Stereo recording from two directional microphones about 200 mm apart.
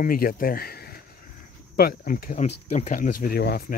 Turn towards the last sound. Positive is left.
turn(degrees=50)  # may be behind; listen again after turning